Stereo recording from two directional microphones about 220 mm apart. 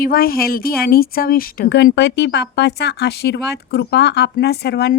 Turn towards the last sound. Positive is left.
turn(degrees=50)  # may be behind; listen again after turning